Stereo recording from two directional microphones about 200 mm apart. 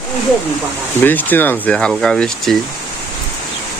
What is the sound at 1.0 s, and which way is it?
Speech, 10° left (ahead or behind).